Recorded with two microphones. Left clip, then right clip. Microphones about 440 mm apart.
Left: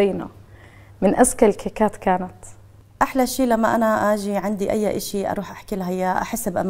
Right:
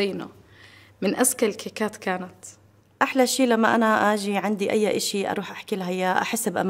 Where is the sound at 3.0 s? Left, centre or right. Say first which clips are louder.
Left 1 dB; left.